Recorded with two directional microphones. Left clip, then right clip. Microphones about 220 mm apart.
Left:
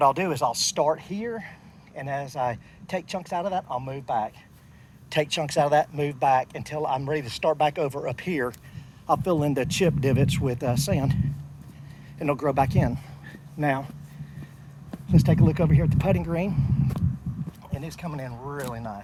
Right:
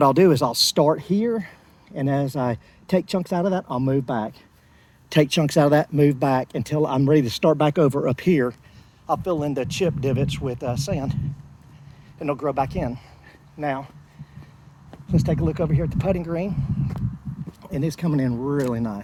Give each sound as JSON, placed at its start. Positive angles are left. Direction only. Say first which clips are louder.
{"t": 0.0, "sound": "speech", "louder": "right 5 dB", "side_deg": 45}
{"t": 9.0, "sound": "speech", "louder": "even", "side_deg": 5}
{"t": 12.2, "sound": "speech", "louder": "even", "side_deg": 10}
{"t": 15.0, "sound": "speech", "louder": "even", "side_deg": 15}
{"t": 17.6, "sound": "speech", "louder": "right 11 dB", "side_deg": 50}